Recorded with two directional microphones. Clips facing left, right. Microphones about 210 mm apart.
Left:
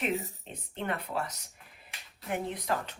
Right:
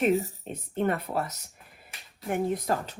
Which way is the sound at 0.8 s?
45° right (ahead or behind).